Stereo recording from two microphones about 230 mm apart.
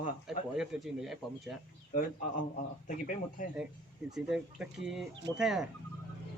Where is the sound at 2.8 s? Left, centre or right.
Left.